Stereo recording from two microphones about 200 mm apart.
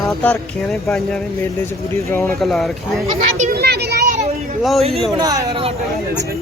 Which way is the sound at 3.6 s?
55° right (ahead or behind).